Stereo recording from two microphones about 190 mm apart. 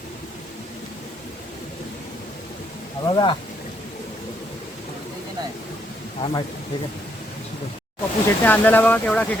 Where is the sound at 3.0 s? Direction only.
25° left (ahead or behind).